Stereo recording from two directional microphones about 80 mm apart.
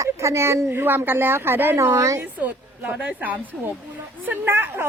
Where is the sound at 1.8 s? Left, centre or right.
Right.